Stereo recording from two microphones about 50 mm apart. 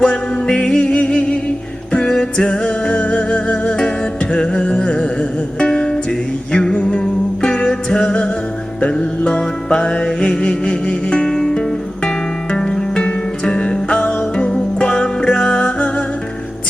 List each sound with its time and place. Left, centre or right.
0.0 s music: centre